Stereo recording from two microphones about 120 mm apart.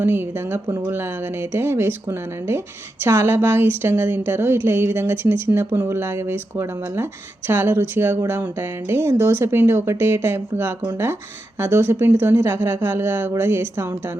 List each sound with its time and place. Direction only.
0.0 s a woman's voice: 20° right (ahead or behind)